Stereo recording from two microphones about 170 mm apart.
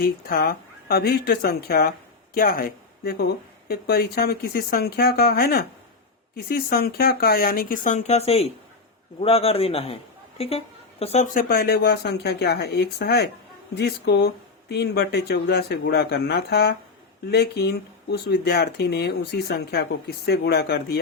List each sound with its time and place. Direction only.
0.0 s a man's voice: 60° left (ahead or behind); by 11.3 s 40° left (ahead or behind)
11.3 s speech: 60° left (ahead or behind)